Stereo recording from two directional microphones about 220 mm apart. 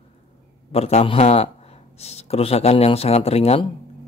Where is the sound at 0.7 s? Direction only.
30° left (ahead or behind).